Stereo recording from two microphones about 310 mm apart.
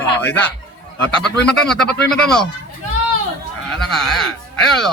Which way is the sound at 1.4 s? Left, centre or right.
Centre.